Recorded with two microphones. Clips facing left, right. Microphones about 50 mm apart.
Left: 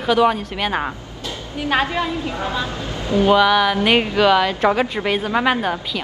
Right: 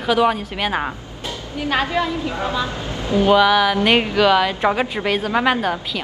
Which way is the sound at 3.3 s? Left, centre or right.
Centre.